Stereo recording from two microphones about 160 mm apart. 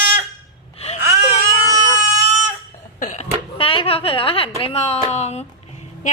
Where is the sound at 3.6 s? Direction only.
35° left (ahead or behind).